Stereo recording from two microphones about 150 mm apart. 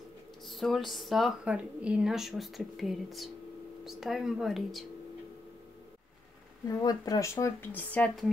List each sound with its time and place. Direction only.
0.5 s speech: centre (ahead or behind)
6.7 s speech: 25° left (ahead or behind); by 8.3 s 10° left (ahead or behind)